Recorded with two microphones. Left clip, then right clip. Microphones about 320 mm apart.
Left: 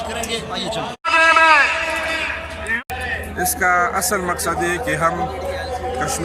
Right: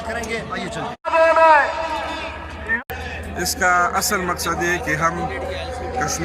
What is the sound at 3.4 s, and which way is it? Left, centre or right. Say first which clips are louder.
A man's voice: even; centre.